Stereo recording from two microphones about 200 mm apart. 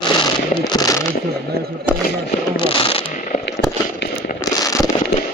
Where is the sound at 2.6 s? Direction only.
25° left (ahead or behind).